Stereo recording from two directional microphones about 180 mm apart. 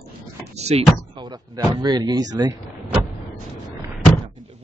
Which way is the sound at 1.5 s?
20° right (ahead or behind).